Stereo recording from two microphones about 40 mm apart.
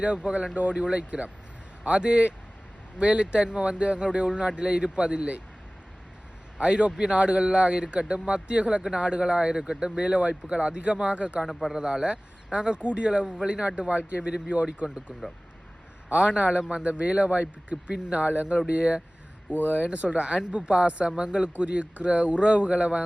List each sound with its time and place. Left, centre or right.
0.0 s speech: right
6.6 s speech: right
11.7 s speech: centre
16.0 s speech: right
19.5 s speech: left
19.7 s speech: right